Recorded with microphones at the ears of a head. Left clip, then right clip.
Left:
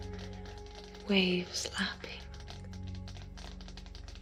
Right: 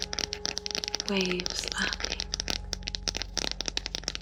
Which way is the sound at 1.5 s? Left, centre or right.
Right.